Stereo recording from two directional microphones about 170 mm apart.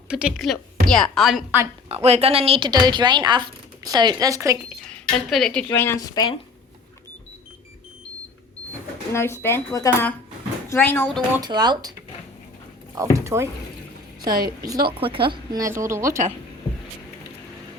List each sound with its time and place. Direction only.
0.1 s a woman's voice: 5° right (ahead or behind)
1.9 s speech: 40° right (ahead or behind); by 4.5 s 20° right (ahead or behind)
4.7 s speech: centre (ahead or behind)
5.6 s a woman's voice: 15° left (ahead or behind)
9.1 s speech: 15° left (ahead or behind)
11.3 s speech: 25° right (ahead or behind)
13.0 s speech: 15° right (ahead or behind)
14.3 s a woman's voice: 60° right (ahead or behind)
14.9 s speech: 30° right (ahead or behind)
15.6 s speech: 15° right (ahead or behind)